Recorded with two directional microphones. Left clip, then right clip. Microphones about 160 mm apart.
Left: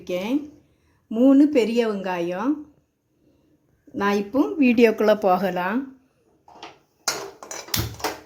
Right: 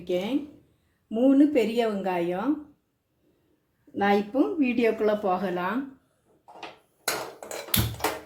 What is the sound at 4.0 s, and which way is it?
Speech, 70° left (ahead or behind).